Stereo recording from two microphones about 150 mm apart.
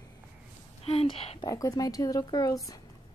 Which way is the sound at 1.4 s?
25° left (ahead or behind).